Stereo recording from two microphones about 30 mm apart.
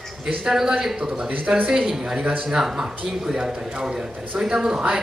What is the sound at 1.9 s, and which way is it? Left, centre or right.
A man's voice, centre.